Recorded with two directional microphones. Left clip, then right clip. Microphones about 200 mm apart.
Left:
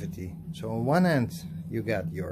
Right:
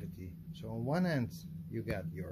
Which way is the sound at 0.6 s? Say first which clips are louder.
Left 11 dB; 5° left (ahead or behind).